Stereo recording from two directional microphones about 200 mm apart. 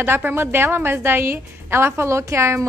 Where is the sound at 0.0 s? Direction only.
10° right (ahead or behind).